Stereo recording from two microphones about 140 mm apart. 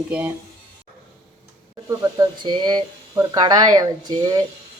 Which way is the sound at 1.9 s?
25° right (ahead or behind).